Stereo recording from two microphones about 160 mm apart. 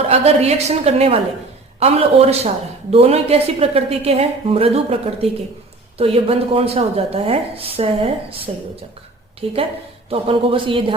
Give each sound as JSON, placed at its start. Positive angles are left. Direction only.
{"t": 0.1, "sound": "speech", "side_deg": -40}